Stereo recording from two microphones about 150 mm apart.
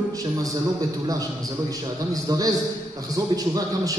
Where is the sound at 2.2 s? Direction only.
25° right (ahead or behind).